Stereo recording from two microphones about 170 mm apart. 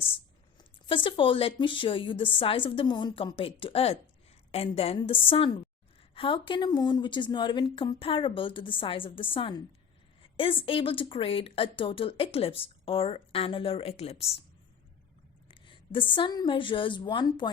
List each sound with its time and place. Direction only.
0.9 s speech: 30° left (ahead or behind)
15.4 s a woman's voice: 30° left (ahead or behind)